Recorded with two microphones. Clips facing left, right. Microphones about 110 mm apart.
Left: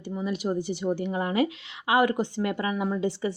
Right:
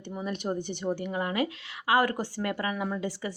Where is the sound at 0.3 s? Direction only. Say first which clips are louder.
Left 3 dB; 5° left (ahead or behind).